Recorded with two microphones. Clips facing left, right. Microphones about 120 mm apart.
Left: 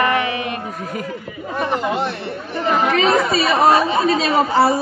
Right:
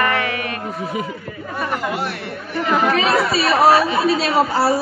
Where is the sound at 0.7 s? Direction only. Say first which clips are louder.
Right 2 dB; 5° right (ahead or behind).